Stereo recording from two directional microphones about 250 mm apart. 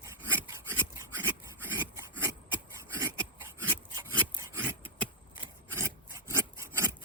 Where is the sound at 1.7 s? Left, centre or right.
Centre.